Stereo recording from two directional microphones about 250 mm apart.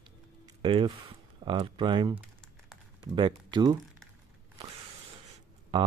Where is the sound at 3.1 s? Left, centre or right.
Centre.